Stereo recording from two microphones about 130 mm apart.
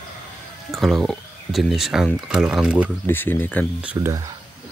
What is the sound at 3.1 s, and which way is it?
Speech, 15° left (ahead or behind).